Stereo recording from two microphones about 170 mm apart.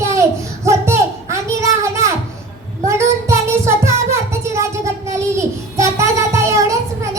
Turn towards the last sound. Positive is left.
turn(degrees=-20)  # may be behind; listen again after turning